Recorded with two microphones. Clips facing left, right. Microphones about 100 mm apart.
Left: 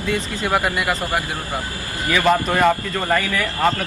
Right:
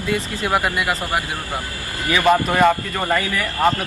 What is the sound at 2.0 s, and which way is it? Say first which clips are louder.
Speech: right 1 dB; 15° right (ahead or behind).